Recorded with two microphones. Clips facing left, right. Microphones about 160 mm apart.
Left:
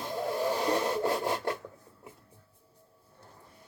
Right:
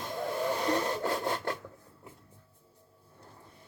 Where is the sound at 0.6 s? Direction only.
20° left (ahead or behind).